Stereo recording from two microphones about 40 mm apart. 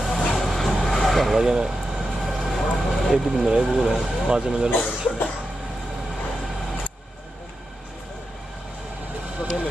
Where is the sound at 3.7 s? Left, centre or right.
Centre.